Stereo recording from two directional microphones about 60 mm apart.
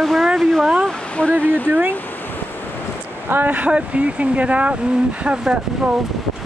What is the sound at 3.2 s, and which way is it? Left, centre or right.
Speech, right.